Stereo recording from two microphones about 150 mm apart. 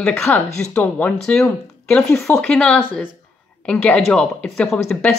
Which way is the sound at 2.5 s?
5° left (ahead or behind).